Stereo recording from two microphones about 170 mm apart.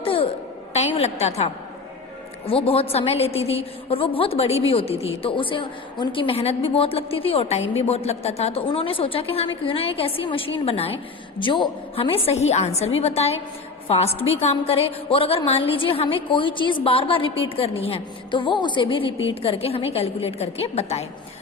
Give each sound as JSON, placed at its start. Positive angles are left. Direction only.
{"t": 0.0, "sound": "a sound", "side_deg": 30}
{"t": 0.9, "sound": "a woman's voice", "side_deg": 40}
{"t": 2.5, "sound": "a woman's voice", "side_deg": 35}